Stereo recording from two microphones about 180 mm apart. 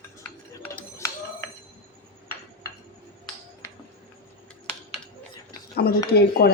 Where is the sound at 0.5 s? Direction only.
15° left (ahead or behind).